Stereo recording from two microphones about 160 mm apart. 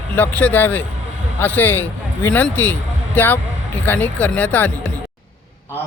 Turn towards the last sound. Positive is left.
turn(degrees=10)  # may be behind; listen again after turning